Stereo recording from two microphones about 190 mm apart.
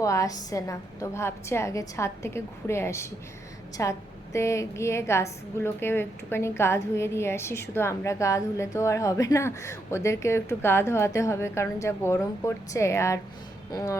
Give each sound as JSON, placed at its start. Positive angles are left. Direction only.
{"t": 0.0, "sound": "a woman's voice", "side_deg": 15}